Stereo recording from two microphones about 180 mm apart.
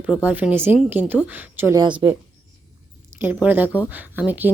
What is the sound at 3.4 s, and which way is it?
Speech, 10° right (ahead or behind).